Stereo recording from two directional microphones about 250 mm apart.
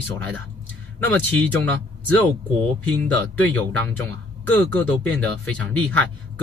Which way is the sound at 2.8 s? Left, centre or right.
Centre.